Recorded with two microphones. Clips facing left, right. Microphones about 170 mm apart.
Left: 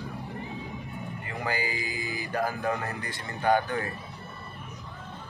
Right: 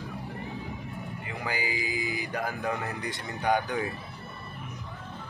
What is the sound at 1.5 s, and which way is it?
Speech, 10° right (ahead or behind).